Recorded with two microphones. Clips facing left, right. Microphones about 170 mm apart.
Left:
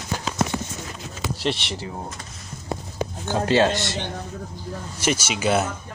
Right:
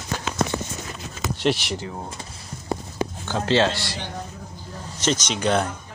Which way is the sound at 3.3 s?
15° left (ahead or behind).